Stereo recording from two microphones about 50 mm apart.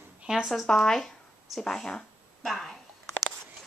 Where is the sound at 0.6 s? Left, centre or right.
Centre.